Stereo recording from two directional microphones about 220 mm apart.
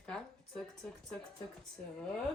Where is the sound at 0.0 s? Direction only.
5° left (ahead or behind).